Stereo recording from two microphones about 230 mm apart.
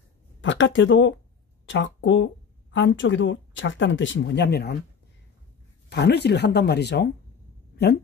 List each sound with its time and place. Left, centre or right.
0.4 s speech: left
5.9 s speech: left
7.7 s a sound: left